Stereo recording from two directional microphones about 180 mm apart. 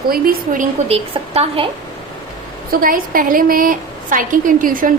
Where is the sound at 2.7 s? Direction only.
55° right (ahead or behind).